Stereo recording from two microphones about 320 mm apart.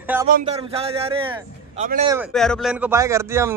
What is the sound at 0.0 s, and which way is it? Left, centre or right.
Speech, centre.